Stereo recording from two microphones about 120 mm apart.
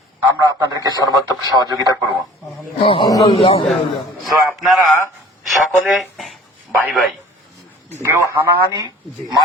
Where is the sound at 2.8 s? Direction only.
50° left (ahead or behind).